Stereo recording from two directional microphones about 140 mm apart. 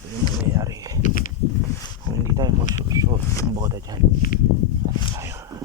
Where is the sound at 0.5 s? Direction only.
25° right (ahead or behind).